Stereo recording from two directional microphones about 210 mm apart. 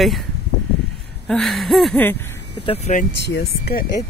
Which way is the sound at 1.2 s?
Centre (ahead or behind).